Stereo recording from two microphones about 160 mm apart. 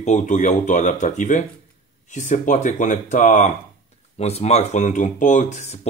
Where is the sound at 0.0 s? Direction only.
50° left (ahead or behind).